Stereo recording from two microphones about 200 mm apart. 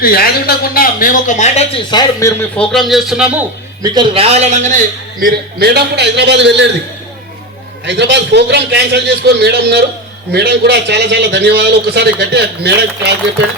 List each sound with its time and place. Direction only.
0.0 s speech: 50° left (ahead or behind); by 2.3 s 20° left (ahead or behind)
2.6 s speech: centre (ahead or behind)
3.8 s a man's voice: 25° right (ahead or behind)
5.2 s a man's voice: 50° right (ahead or behind)
7.9 s a man's voice: 60° right (ahead or behind)